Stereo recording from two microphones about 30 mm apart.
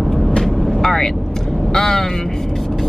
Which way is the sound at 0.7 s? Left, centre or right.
Centre.